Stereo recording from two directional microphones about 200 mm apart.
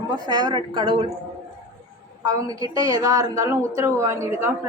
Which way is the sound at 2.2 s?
15° right (ahead or behind).